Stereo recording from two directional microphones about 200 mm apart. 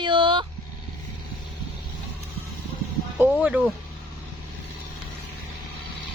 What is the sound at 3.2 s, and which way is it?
Speech, 5° right (ahead or behind).